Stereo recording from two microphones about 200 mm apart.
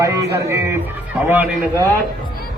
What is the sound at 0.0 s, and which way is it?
Speech, 15° right (ahead or behind).